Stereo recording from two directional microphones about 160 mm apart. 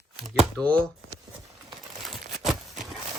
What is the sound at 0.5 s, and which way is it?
Speech, 5° left (ahead or behind).